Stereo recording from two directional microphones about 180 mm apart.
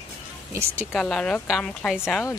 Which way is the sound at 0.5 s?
15° right (ahead or behind).